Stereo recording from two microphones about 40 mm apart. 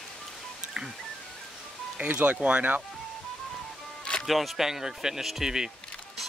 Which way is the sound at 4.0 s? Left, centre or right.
Left.